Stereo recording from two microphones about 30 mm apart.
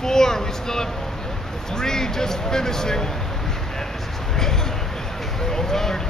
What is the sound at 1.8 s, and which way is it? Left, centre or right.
Speech, centre.